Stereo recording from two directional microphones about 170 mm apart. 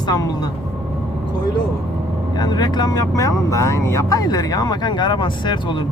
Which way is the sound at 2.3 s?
25° left (ahead or behind).